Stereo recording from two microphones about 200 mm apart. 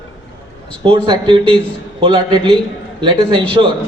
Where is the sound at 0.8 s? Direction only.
25° right (ahead or behind).